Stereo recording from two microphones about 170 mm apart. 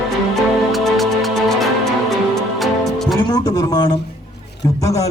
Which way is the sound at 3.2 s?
20° left (ahead or behind).